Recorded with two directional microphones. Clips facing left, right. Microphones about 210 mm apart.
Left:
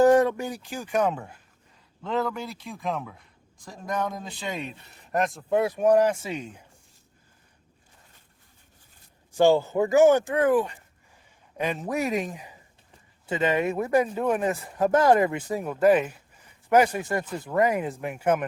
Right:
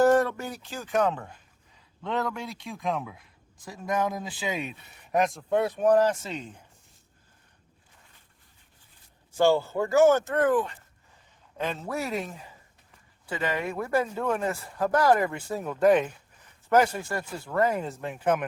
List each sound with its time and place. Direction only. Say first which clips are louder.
0.0 s speech: left 3 dB; 15° left (ahead or behind)
9.4 s speech: left 3 dB; 15° left (ahead or behind)